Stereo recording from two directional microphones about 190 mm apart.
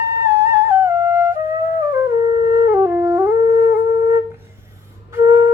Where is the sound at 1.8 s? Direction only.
15° right (ahead or behind).